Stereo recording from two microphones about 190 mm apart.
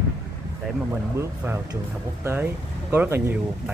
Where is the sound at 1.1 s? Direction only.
15° right (ahead or behind).